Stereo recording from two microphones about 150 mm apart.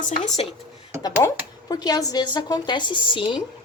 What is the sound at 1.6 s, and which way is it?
A woman's voice, 25° left (ahead or behind).